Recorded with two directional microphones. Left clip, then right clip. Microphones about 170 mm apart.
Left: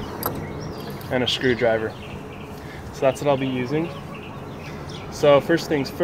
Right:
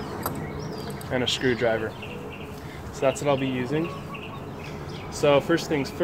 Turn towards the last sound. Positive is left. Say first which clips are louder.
# left 3 dB
turn(degrees=25)  # may be behind; listen again after turning